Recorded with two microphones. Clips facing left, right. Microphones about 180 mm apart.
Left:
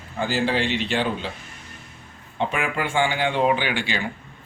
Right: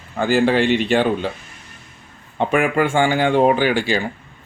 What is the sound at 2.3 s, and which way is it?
Speech, 50° right (ahead or behind).